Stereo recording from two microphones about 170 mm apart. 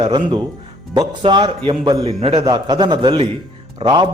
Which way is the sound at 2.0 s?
35° right (ahead or behind).